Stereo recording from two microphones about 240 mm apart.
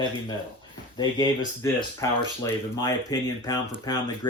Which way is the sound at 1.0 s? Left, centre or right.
Centre.